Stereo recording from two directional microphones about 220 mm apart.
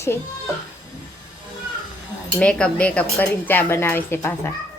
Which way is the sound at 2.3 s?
5° left (ahead or behind).